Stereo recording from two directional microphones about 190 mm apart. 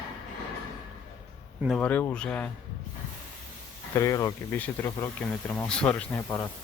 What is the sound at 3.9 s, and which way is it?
Speech, 15° left (ahead or behind).